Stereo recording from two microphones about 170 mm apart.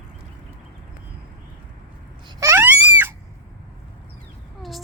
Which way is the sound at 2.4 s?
15° right (ahead or behind).